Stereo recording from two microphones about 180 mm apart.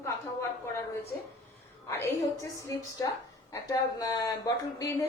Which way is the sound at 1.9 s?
15° left (ahead or behind).